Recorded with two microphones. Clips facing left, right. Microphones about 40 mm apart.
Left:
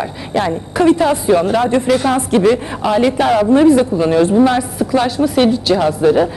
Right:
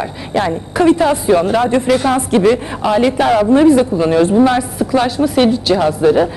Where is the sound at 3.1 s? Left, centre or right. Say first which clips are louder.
Right 1 dB; right.